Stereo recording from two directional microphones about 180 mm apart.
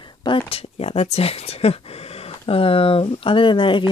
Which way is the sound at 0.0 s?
25° left (ahead or behind).